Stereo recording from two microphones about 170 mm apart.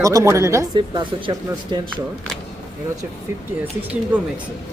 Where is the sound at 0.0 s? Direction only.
20° right (ahead or behind).